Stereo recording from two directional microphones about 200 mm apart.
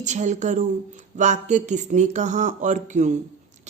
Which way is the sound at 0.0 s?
35° right (ahead or behind).